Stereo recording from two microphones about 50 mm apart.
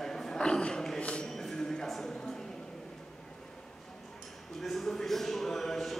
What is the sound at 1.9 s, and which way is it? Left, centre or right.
Speech, centre.